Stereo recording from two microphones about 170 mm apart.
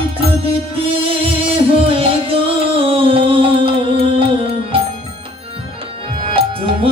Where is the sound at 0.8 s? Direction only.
35° right (ahead or behind).